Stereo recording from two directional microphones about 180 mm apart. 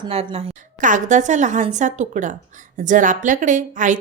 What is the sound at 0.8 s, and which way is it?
A woman's voice, 45° right (ahead or behind).